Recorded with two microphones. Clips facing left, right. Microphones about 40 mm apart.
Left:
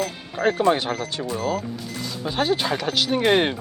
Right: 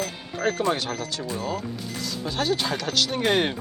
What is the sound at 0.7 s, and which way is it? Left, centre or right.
Speech, centre.